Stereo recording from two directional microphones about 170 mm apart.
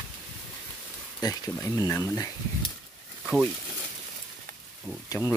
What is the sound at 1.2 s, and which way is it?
Speech, 25° left (ahead or behind).